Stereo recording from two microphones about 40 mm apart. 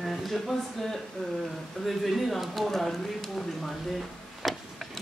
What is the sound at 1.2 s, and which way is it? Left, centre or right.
Speech, centre.